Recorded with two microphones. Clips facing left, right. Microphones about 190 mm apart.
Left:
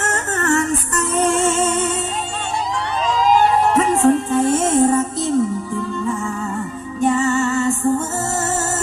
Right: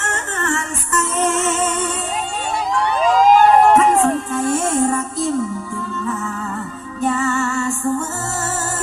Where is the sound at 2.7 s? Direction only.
55° right (ahead or behind).